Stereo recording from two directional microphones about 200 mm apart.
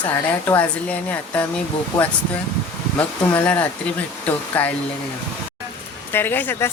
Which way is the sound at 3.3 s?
10° left (ahead or behind).